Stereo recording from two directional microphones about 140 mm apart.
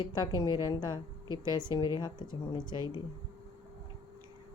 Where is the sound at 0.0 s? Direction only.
30° left (ahead or behind).